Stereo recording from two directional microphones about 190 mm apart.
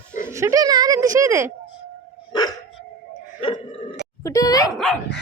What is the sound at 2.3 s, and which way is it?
Dog, 20° left (ahead or behind).